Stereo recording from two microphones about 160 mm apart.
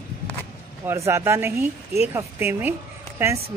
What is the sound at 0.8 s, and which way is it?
Speech, 15° right (ahead or behind).